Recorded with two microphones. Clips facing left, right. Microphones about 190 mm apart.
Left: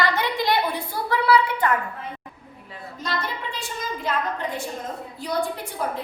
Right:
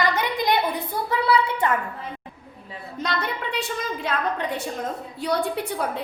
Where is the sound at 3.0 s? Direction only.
65° right (ahead or behind).